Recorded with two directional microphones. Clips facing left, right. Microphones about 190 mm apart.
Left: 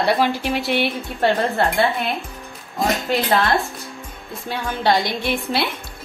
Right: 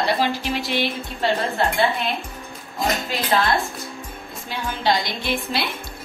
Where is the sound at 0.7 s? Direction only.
60° left (ahead or behind).